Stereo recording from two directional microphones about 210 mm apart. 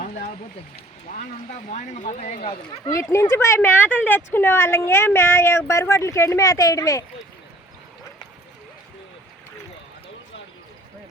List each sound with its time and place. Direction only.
0.0 s a sound: 35° left (ahead or behind)
1.7 s speech: 35° left (ahead or behind)
2.8 s speech: 15° left (ahead or behind)